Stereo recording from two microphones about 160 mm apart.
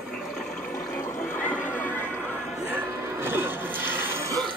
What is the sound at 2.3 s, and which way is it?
Music, 15° right (ahead or behind).